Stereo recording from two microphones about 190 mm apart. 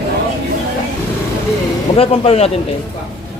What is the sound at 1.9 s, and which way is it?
Speech, 30° left (ahead or behind).